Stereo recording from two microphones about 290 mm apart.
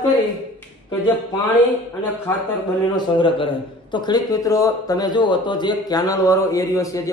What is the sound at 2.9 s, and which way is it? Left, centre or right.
Speech, centre.